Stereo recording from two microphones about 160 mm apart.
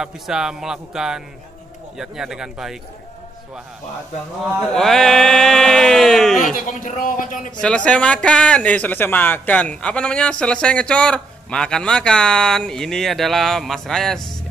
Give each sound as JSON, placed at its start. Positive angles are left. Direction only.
{"t": 0.0, "sound": "speech", "side_deg": -5}
{"t": 4.6, "sound": "speech", "side_deg": 0}
{"t": 6.5, "sound": "a man's voice", "side_deg": 55}
{"t": 7.6, "sound": "speech", "side_deg": 5}